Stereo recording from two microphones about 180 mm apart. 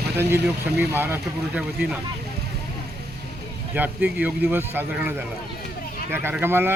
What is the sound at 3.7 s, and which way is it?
A man's voice, 10° right (ahead or behind).